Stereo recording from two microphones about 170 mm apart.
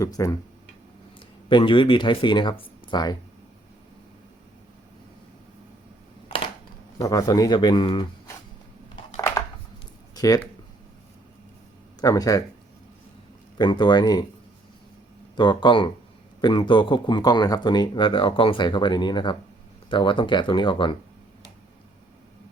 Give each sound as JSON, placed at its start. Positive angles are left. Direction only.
{"t": 0.0, "sound": "speech", "side_deg": 20}
{"t": 1.5, "sound": "speech", "side_deg": 30}
{"t": 6.2, "sound": "a sound", "side_deg": 30}
{"t": 7.0, "sound": "speech", "side_deg": 20}
{"t": 9.1, "sound": "a sound", "side_deg": 15}
{"t": 10.2, "sound": "speech", "side_deg": 20}
{"t": 11.9, "sound": "speech", "side_deg": 20}
{"t": 13.6, "sound": "speech", "side_deg": 25}
{"t": 15.4, "sound": "speech", "side_deg": 25}